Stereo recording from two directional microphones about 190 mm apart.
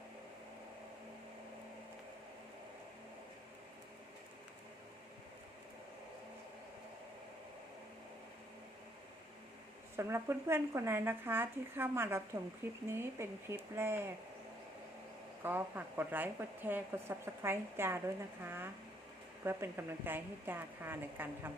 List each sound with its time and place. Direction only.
10.0 s a woman's voice: 15° right (ahead or behind)
15.4 s a woman's voice: 10° right (ahead or behind)